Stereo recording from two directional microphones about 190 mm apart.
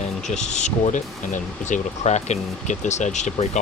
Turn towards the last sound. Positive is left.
turn(degrees=35)  # may be behind; listen again after turning